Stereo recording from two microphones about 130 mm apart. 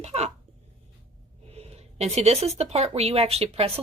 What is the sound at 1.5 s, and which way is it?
Speech, 50° right (ahead or behind).